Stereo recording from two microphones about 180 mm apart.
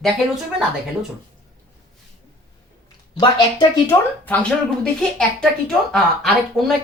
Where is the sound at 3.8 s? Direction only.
10° left (ahead or behind).